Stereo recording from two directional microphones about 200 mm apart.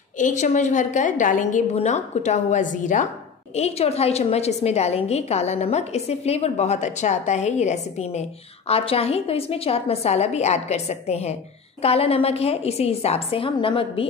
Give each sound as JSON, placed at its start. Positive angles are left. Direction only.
{"t": 0.2, "sound": "a woman's voice", "side_deg": 40}